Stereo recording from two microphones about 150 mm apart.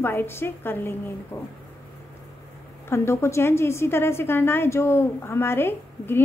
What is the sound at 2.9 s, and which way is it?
A woman's voice, 20° left (ahead or behind).